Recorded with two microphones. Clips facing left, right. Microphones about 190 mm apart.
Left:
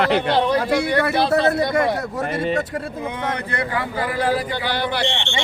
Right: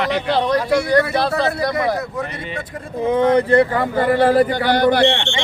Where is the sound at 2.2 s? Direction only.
45° left (ahead or behind).